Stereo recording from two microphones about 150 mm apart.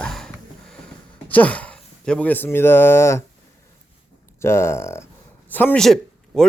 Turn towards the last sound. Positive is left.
turn(degrees=0)  # may be behind; listen again after turning